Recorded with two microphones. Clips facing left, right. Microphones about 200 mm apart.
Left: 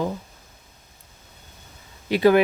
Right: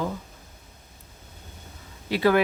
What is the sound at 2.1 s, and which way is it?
Speech, 20° left (ahead or behind).